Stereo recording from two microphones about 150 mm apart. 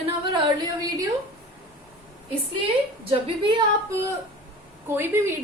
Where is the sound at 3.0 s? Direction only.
40° right (ahead or behind).